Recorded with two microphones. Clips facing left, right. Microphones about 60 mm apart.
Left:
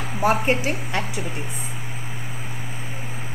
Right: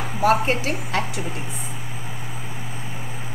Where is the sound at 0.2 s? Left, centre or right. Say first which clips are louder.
Right 1 dB; centre.